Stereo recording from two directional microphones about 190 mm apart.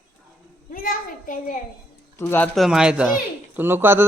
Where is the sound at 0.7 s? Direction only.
45° left (ahead or behind).